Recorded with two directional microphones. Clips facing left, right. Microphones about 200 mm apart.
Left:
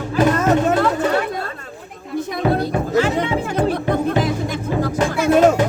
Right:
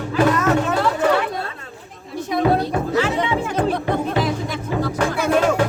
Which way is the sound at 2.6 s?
45° left (ahead or behind).